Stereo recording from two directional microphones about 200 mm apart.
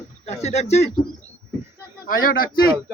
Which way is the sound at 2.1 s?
45° left (ahead or behind).